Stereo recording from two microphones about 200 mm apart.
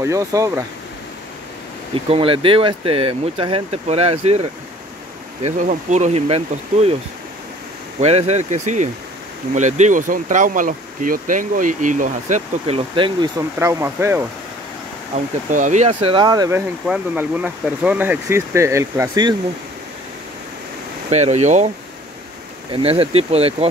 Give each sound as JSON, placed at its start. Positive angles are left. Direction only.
{"t": 0.0, "sound": "speech", "side_deg": -15}
{"t": 2.0, "sound": "speech", "side_deg": -25}
{"t": 8.0, "sound": "speech", "side_deg": -30}
{"t": 13.6, "sound": "speech", "side_deg": -15}
{"t": 15.5, "sound": "speech", "side_deg": -35}
{"t": 15.9, "sound": "speech", "side_deg": -25}
{"t": 21.1, "sound": "speech", "side_deg": -35}
{"t": 22.7, "sound": "speech", "side_deg": -30}